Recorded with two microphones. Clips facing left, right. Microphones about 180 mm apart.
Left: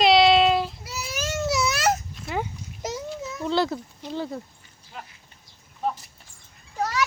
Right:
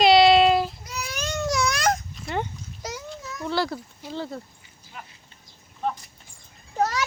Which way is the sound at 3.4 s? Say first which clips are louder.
Left 2 dB; 20° left (ahead or behind).